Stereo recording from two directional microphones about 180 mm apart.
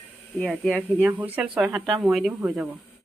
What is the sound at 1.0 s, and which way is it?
Speech, 10° right (ahead or behind).